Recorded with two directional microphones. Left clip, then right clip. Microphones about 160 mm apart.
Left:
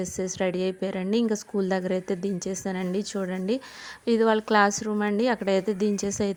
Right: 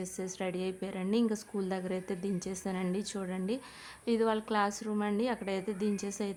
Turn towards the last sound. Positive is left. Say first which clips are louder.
# left 9 dB
turn(degrees=35)  # may be behind; listen again after turning